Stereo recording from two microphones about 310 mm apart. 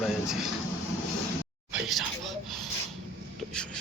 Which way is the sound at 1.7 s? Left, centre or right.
Centre.